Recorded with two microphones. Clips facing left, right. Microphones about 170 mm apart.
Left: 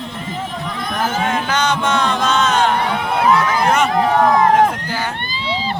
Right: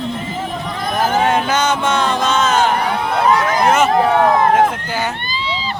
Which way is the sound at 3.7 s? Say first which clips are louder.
Right 4 dB; centre (ahead or behind).